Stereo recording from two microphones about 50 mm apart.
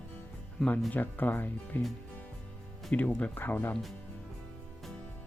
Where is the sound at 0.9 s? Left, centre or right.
Left.